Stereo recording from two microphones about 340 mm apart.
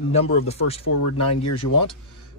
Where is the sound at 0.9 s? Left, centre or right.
Left.